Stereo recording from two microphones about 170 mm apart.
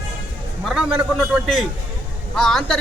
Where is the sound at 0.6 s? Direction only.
5° right (ahead or behind).